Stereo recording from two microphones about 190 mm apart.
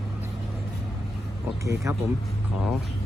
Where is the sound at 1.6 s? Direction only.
15° right (ahead or behind).